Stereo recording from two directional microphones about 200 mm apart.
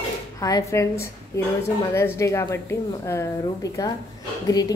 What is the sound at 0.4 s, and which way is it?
A woman's voice, 15° left (ahead or behind).